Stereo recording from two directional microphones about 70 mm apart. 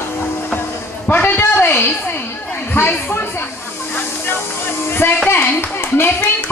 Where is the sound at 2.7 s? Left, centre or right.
Left.